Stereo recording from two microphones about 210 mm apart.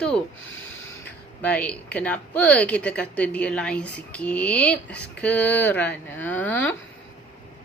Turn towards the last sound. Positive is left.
turn(degrees=10)  # may be behind; listen again after turning